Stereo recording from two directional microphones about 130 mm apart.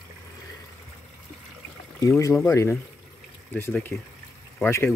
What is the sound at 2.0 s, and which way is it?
Speech, 20° left (ahead or behind).